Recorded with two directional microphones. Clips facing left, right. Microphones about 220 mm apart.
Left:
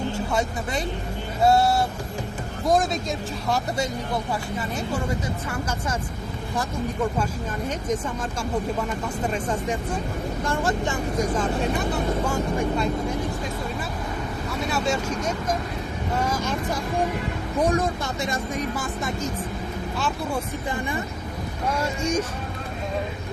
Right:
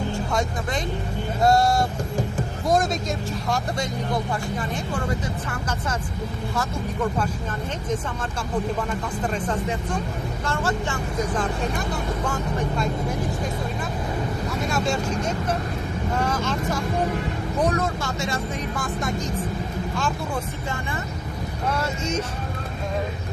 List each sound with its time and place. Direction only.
1.5 s speech: 5° left (ahead or behind)
9.2 s speech: 10° left (ahead or behind)
12.2 s speech: 10° left (ahead or behind)
16.2 s speech: 10° left (ahead or behind)
21.7 s speech: 10° left (ahead or behind)